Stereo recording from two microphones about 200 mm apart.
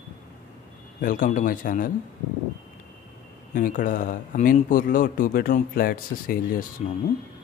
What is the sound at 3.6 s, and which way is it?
A man's voice, 45° left (ahead or behind).